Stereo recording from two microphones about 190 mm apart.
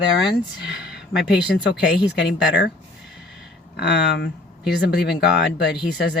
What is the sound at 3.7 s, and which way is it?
Speech, 60° left (ahead or behind).